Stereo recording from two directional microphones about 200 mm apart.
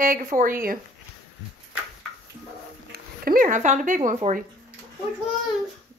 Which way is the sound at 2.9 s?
45° right (ahead or behind).